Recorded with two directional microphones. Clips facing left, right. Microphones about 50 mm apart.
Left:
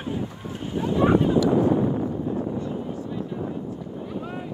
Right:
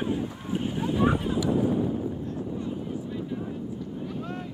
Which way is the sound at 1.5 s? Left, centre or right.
Left.